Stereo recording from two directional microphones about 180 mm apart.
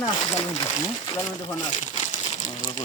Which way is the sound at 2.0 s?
45° left (ahead or behind).